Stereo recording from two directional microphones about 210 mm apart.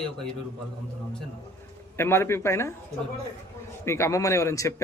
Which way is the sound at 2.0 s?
10° left (ahead or behind).